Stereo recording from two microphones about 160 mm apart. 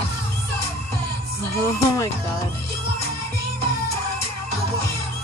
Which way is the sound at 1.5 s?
20° left (ahead or behind).